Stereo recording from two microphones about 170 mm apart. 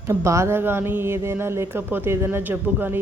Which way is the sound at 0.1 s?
15° right (ahead or behind).